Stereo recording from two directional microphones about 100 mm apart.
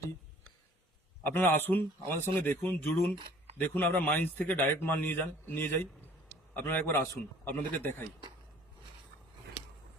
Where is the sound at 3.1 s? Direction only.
55° right (ahead or behind).